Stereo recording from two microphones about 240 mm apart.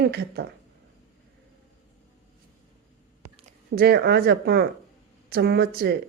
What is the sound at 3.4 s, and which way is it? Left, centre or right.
A woman's voice, right.